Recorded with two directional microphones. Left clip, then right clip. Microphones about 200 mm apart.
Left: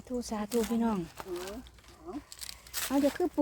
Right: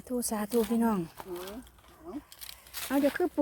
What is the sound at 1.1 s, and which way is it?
Speech, 5° right (ahead or behind).